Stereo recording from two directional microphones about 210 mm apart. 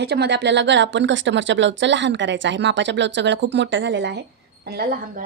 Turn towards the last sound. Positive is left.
turn(degrees=-50)  # may be behind; listen again after turning